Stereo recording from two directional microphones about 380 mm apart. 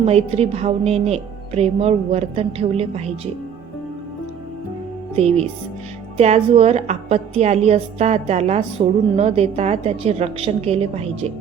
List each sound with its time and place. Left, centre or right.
0.0 s a woman's voice: centre
5.1 s a woman's voice: centre